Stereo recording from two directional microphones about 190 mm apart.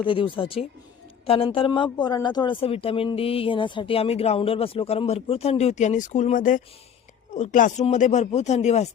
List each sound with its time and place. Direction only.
0.0 s speech: 25° left (ahead or behind)